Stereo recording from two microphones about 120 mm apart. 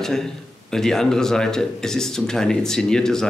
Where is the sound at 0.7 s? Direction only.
5° left (ahead or behind).